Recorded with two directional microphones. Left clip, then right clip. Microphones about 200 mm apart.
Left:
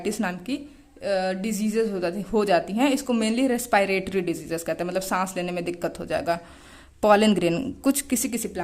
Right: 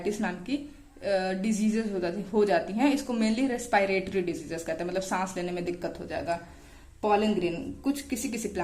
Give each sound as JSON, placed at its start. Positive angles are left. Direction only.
{"t": 0.0, "sound": "a woman's voice", "side_deg": 30}
{"t": 8.6, "sound": "a woman's voice", "side_deg": 20}